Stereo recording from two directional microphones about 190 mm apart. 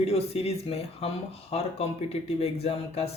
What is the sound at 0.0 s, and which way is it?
Speech, 30° left (ahead or behind).